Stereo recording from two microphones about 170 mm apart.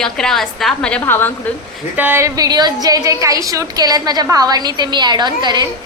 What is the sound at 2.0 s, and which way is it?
A woman's voice, 10° right (ahead or behind).